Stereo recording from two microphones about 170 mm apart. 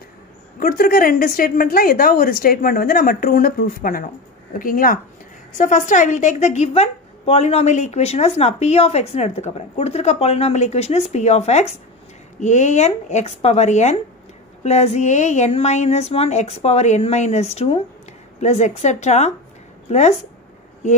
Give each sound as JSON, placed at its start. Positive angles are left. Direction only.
{"t": 0.6, "sound": "a woman's voice", "side_deg": 55}